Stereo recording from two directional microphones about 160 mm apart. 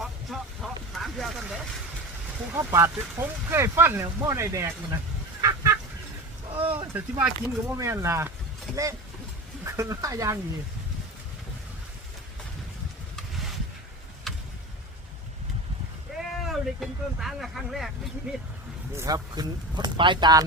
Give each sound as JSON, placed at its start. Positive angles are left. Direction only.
{"t": 0.0, "sound": "vehicle", "side_deg": 0}
{"t": 2.5, "sound": "speech", "side_deg": -15}
{"t": 5.4, "sound": "goose", "side_deg": -20}
{"t": 6.7, "sound": "speech", "side_deg": -10}
{"t": 7.8, "sound": "speech", "side_deg": -20}
{"t": 14.3, "sound": "vehicle", "side_deg": 0}
{"t": 16.1, "sound": "speech", "side_deg": 0}
{"t": 18.9, "sound": "speech", "side_deg": -20}